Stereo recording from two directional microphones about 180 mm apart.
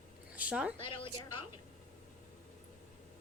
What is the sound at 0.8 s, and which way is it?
Speech, 30° left (ahead or behind).